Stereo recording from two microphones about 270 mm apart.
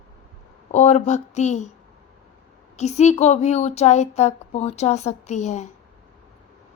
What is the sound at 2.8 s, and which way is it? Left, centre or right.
Speech, left.